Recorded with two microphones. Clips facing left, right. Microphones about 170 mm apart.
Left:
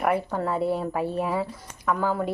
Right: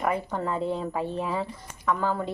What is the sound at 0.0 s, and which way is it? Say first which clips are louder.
Speech: left 3 dB; 10° left (ahead or behind).